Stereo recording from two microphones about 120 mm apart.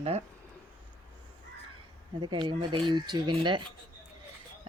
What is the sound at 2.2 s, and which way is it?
A woman's voice, 40° right (ahead or behind).